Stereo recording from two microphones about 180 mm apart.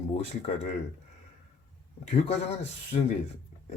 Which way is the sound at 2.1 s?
35° left (ahead or behind).